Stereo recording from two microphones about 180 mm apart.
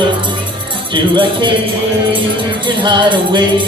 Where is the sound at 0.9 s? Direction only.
25° right (ahead or behind).